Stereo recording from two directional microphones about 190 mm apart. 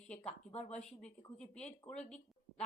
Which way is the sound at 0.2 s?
35° left (ahead or behind).